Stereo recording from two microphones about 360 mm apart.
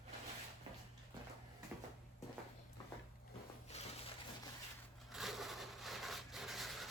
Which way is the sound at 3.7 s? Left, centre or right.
Centre.